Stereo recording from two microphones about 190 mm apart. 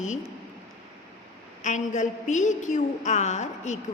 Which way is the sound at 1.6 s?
40° left (ahead or behind).